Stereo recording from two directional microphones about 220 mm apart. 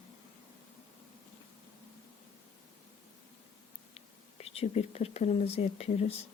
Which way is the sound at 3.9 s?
25° left (ahead or behind).